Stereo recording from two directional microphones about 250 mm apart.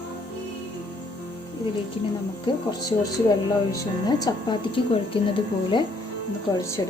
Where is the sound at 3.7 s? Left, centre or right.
Centre.